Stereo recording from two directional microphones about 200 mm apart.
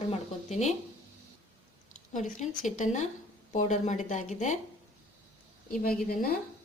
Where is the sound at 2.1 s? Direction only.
40° left (ahead or behind).